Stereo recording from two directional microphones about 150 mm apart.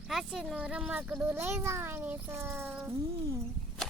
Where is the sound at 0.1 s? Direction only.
Centre (ahead or behind).